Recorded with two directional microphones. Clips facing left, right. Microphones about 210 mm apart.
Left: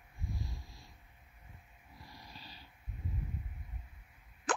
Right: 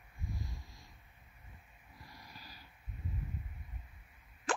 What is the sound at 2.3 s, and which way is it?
Dog, 30° left (ahead or behind).